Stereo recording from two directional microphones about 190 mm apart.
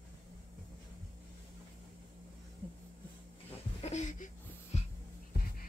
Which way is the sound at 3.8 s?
35° left (ahead or behind).